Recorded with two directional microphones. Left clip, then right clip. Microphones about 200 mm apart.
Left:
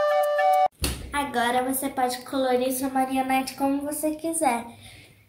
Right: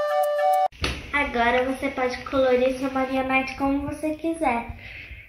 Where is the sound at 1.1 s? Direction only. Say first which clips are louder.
Right 3 dB; 20° left (ahead or behind).